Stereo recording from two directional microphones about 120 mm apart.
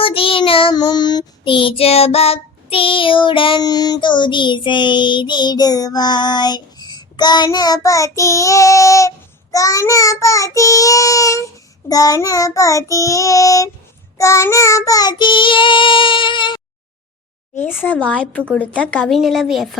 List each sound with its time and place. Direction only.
0.0 s child singing: 50° left (ahead or behind)
3.6 s child singing: 35° left (ahead or behind)
17.8 s a woman's voice: 10° left (ahead or behind)
19.1 s a woman's voice: centre (ahead or behind)